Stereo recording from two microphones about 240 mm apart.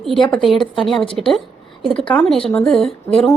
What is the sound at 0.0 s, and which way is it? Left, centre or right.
Speech, centre.